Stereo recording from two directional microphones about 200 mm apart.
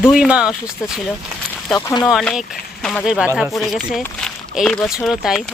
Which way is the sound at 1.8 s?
20° left (ahead or behind).